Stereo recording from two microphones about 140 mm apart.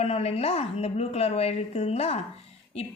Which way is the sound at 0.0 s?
45° left (ahead or behind).